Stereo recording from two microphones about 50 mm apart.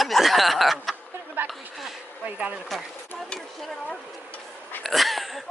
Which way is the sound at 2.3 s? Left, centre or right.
Right.